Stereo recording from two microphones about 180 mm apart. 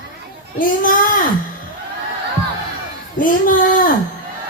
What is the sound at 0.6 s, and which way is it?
Speech, 50° left (ahead or behind).